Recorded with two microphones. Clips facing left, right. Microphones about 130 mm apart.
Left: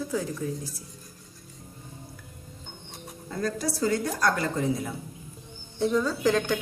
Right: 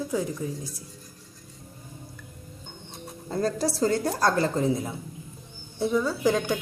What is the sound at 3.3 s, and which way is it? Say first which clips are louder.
A woman's voice: right 3 dB; 30° right (ahead or behind).